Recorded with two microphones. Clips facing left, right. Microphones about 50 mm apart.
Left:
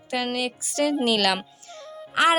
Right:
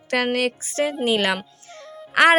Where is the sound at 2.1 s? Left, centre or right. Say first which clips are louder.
Right 5 dB; right.